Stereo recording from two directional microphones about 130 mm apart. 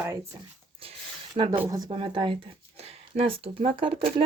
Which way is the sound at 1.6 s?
30° right (ahead or behind).